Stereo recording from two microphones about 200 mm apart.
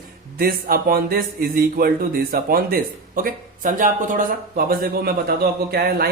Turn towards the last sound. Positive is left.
turn(degrees=-50)  # may be behind; listen again after turning